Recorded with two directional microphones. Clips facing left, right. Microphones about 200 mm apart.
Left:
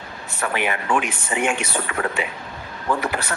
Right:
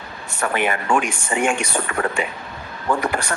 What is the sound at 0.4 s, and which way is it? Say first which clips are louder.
A man's voice: right 2 dB; 45° right (ahead or behind).